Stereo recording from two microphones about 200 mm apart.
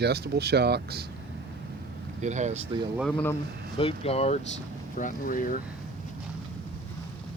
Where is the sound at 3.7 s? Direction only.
30° left (ahead or behind).